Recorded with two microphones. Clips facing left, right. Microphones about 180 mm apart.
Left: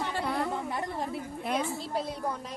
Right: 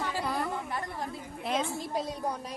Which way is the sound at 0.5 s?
20° left (ahead or behind).